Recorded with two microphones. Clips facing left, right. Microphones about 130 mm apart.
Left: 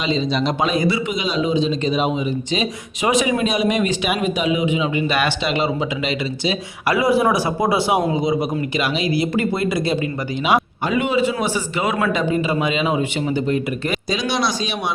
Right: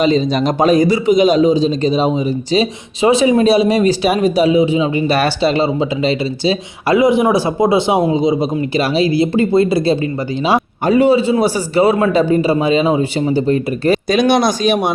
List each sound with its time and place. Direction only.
0.0 s a man's voice: 45° right (ahead or behind)
14.1 s speech: 55° right (ahead or behind)